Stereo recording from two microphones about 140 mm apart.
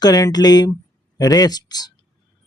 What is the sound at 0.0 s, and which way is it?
Speech, 25° left (ahead or behind).